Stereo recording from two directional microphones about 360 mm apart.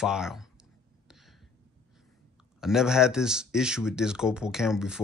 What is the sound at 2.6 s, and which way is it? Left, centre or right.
Speech, centre.